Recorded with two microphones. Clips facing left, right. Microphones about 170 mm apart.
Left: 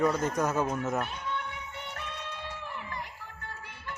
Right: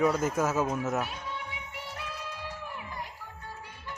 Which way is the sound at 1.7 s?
10° right (ahead or behind).